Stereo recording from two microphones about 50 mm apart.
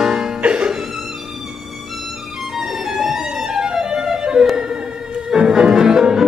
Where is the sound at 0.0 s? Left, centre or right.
Centre.